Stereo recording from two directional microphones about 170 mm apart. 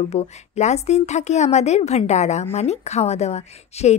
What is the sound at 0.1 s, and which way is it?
A woman's voice, 40° left (ahead or behind).